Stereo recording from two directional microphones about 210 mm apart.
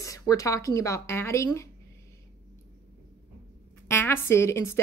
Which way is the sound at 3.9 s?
10° left (ahead or behind).